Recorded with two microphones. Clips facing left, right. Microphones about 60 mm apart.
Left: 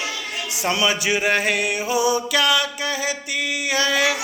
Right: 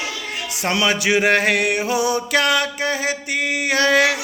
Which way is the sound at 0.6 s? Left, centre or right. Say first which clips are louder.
Right 2 dB; right.